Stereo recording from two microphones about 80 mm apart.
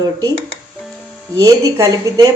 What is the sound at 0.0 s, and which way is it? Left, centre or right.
Speech, right.